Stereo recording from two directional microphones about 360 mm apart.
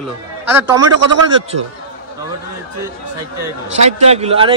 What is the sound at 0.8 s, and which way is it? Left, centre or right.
Speech, right.